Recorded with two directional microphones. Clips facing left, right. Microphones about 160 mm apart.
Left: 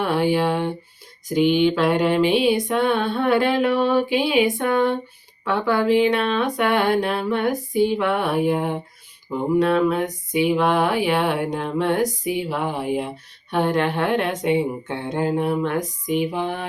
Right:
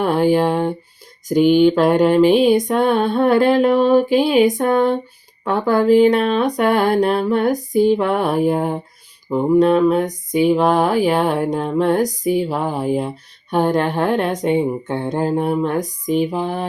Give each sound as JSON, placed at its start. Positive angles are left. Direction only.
{"t": 0.0, "sound": "speech", "side_deg": -45}
{"t": 1.3, "sound": "music", "side_deg": -45}
{"t": 5.5, "sound": "speech", "side_deg": -45}